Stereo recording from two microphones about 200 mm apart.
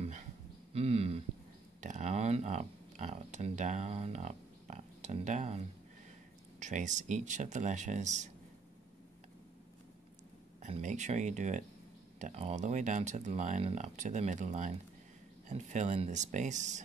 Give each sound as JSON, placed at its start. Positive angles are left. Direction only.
{"t": 0.7, "sound": "speech", "side_deg": -30}
{"t": 6.6, "sound": "speech", "side_deg": -35}
{"t": 10.6, "sound": "speech", "side_deg": -35}